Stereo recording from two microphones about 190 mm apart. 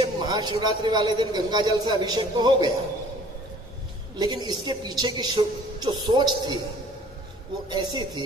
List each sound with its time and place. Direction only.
0.0 s a man's voice: 20° right (ahead or behind)
4.2 s a man's voice: 20° right (ahead or behind)
7.7 s a man's voice: 20° right (ahead or behind)